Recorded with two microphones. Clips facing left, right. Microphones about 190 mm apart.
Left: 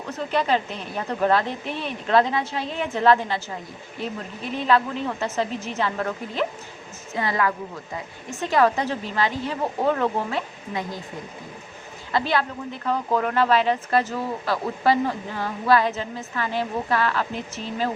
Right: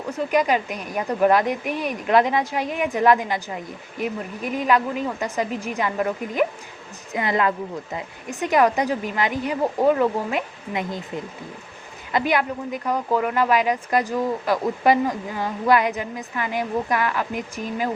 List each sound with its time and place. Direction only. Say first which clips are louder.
0.1 s a woman's voice: right 2 dB; 10° right (ahead or behind)